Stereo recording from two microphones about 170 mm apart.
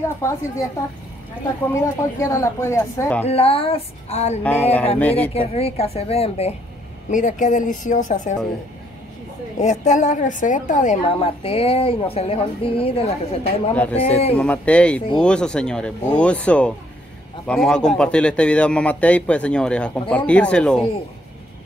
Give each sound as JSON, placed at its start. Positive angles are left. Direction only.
{"t": 0.0, "sound": "a man's voice", "side_deg": 15}
{"t": 1.7, "sound": "a man's voice", "side_deg": 15}
{"t": 3.3, "sound": "a woman's voice", "side_deg": 35}
{"t": 4.4, "sound": "a man's voice", "side_deg": 10}
{"t": 5.3, "sound": "a woman's voice", "side_deg": 35}
{"t": 7.1, "sound": "a woman's voice", "side_deg": 50}
{"t": 9.6, "sound": "a woman's voice", "side_deg": 45}
{"t": 11.1, "sound": "a woman's voice", "side_deg": 35}
{"t": 14.3, "sound": "a man's voice", "side_deg": 10}